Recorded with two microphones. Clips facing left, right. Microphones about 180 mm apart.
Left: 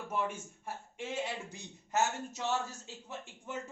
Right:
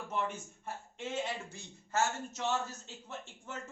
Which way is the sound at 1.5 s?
15° left (ahead or behind).